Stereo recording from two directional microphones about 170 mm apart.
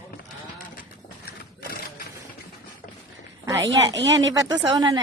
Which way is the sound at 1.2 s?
60° left (ahead or behind).